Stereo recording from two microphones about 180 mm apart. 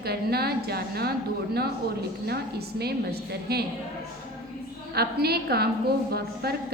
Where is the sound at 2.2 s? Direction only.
65° right (ahead or behind).